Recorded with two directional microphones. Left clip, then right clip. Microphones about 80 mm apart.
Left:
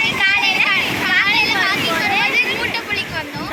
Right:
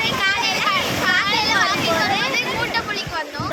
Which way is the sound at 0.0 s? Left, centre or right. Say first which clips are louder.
Left 4 dB; right.